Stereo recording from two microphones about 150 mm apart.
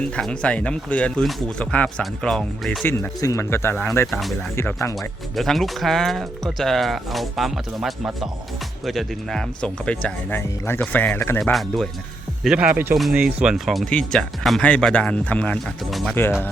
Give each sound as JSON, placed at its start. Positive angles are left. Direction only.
{"t": 0.2, "sound": "speech", "side_deg": 5}
{"t": 2.8, "sound": "speech", "side_deg": 15}
{"t": 4.1, "sound": "speech", "side_deg": 0}
{"t": 4.5, "sound": "speech", "side_deg": 20}
{"t": 4.9, "sound": "speech", "side_deg": 0}
{"t": 11.3, "sound": "speech", "side_deg": 0}